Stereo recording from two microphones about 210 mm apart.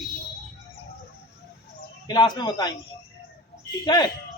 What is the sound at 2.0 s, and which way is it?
Speech, 20° left (ahead or behind).